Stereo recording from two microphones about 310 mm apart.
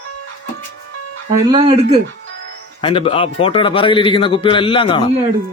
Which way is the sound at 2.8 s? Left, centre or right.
Centre.